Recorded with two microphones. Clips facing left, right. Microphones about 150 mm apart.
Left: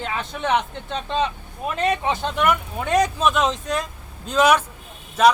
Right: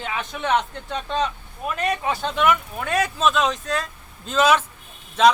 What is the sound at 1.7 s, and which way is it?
Speech, 25° left (ahead or behind).